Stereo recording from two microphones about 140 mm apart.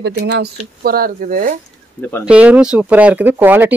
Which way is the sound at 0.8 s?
90° right.